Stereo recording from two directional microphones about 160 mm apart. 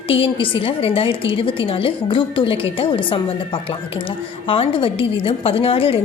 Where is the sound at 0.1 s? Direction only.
35° left (ahead or behind).